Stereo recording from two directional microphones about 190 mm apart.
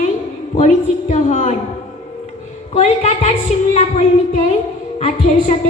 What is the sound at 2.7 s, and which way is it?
A woman's voice, 35° left (ahead or behind).